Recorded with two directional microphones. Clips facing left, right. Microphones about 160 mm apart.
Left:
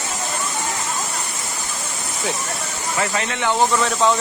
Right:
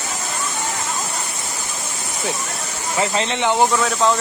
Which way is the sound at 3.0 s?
25° right (ahead or behind).